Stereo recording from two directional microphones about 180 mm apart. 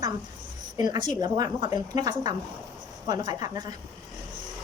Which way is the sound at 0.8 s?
25° right (ahead or behind).